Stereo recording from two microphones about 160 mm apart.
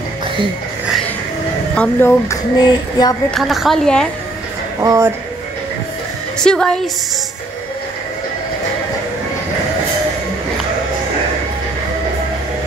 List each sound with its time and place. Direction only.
1.8 s speech: 15° left (ahead or behind)
2.6 s female singing: 25° left (ahead or behind)
3.3 s a woman's voice: centre (ahead or behind)
4.8 s speech: 20° right (ahead or behind)
6.4 s a woman's voice: 5° left (ahead or behind)